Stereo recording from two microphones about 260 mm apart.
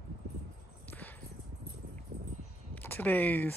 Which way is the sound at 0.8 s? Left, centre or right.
Centre.